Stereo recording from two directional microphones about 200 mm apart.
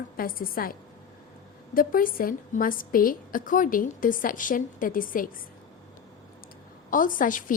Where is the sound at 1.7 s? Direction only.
45° left (ahead or behind).